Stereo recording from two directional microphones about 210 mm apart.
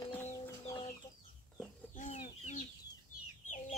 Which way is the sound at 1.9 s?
35° left (ahead or behind).